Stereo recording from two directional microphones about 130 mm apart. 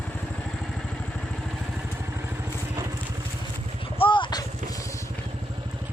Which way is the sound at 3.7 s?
45° left (ahead or behind).